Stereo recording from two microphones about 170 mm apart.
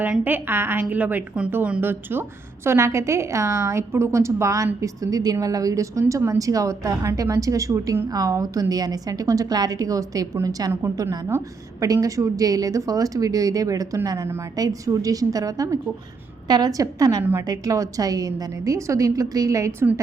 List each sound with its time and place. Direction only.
0.0 s a woman's voice: 10° right (ahead or behind)